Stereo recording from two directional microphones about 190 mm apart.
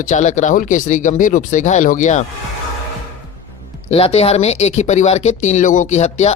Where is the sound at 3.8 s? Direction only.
30° left (ahead or behind).